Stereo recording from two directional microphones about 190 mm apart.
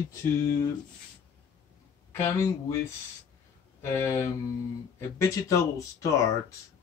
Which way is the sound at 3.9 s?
10° left (ahead or behind).